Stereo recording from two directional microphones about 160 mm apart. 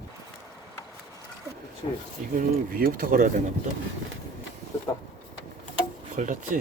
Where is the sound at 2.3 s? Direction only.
60° right (ahead or behind).